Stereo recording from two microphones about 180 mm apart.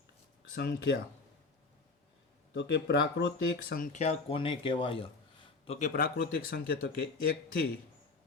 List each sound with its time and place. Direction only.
0.5 s speech: 65° left (ahead or behind)
2.5 s speech: 75° left (ahead or behind)
3.9 s a man's voice: 35° left (ahead or behind)
5.9 s speech: 55° left (ahead or behind)